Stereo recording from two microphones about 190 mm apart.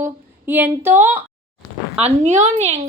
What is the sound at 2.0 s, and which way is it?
Speech, 40° right (ahead or behind).